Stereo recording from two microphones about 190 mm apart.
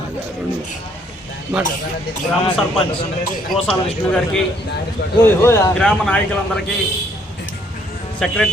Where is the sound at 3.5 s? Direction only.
5° left (ahead or behind).